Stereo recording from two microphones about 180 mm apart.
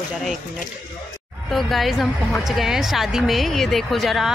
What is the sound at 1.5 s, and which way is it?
Speech, centre (ahead or behind).